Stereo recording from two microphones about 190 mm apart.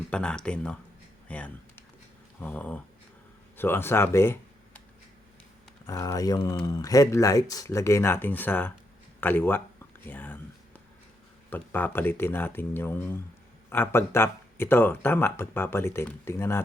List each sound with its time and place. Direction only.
0.1 s speech: 5° left (ahead or behind)
5.8 s speech: 15° left (ahead or behind)
11.5 s speech: 10° left (ahead or behind)